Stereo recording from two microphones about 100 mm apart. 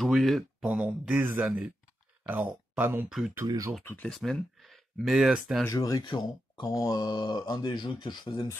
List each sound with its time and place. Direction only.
0.0 s speech: centre (ahead or behind); by 3.1 s 15° right (ahead or behind)
3.1 s speech: 5° right (ahead or behind)
3.4 s speech: 35° right (ahead or behind)
3.8 s speech: 20° left (ahead or behind)
4.1 s speech: centre (ahead or behind)
5.7 s speech: 35° left (ahead or behind)
6.0 s speech: 55° left (ahead or behind)
6.6 s speech: 40° left (ahead or behind)